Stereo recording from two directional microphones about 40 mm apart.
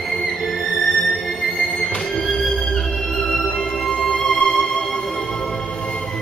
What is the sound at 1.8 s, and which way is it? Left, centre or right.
Music, centre.